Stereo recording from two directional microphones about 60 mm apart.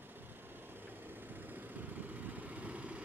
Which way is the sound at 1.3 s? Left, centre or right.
Right.